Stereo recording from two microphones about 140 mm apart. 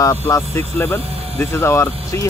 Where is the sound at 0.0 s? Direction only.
25° left (ahead or behind).